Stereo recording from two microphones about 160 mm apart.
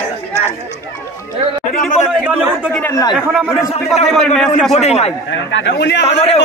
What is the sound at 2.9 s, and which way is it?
Speech, 20° left (ahead or behind).